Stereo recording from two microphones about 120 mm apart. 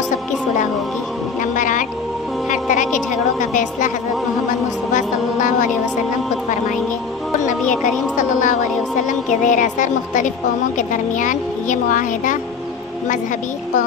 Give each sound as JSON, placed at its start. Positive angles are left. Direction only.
{"t": 1.4, "sound": "music", "side_deg": 90}
{"t": 2.5, "sound": "a sound", "side_deg": 90}
{"t": 4.9, "sound": "music", "side_deg": 90}
{"t": 7.8, "sound": "speech", "side_deg": 90}